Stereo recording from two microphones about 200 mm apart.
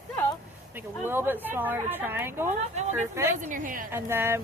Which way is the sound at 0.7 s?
10° right (ahead or behind).